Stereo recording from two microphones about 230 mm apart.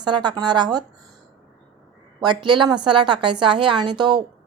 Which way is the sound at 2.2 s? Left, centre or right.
Centre.